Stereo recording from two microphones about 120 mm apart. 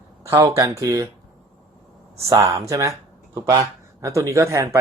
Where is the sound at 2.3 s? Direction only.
25° right (ahead or behind).